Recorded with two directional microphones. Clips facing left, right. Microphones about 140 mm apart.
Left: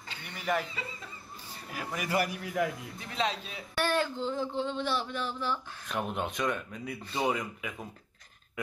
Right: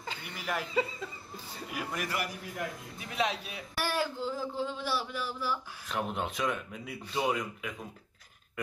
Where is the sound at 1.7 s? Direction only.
5° right (ahead or behind).